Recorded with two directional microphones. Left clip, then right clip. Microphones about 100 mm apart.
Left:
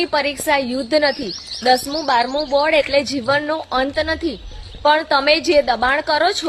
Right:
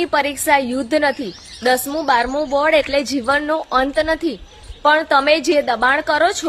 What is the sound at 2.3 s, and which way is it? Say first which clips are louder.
A woman's voice: even; 45° right (ahead or behind).